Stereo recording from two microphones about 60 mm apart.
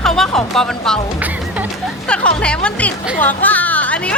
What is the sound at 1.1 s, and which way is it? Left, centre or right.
Music, right.